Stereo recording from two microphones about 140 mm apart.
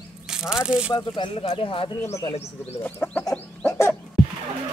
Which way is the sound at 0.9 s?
35° left (ahead or behind).